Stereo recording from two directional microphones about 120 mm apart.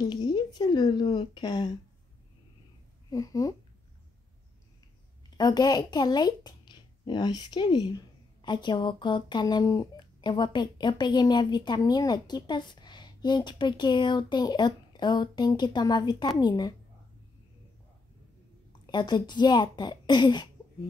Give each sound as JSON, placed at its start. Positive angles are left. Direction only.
{"t": 0.0, "sound": "a woman's voice", "side_deg": 35}
{"t": 3.1, "sound": "speech", "side_deg": 30}
{"t": 5.4, "sound": "speech", "side_deg": 35}
{"t": 18.9, "sound": "speech", "side_deg": 40}